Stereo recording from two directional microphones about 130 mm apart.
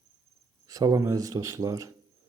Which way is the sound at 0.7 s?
25° right (ahead or behind).